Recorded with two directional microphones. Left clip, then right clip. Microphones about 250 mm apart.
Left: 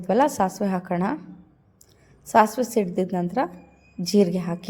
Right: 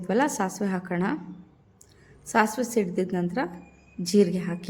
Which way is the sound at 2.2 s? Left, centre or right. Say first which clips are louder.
Left 5 dB; centre.